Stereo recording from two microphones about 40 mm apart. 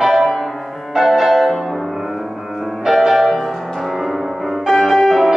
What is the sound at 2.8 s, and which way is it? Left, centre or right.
Music, centre.